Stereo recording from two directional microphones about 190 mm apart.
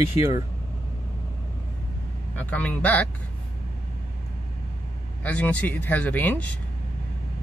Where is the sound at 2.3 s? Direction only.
10° left (ahead or behind).